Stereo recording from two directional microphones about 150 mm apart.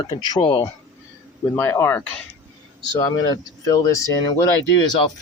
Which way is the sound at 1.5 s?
15° left (ahead or behind).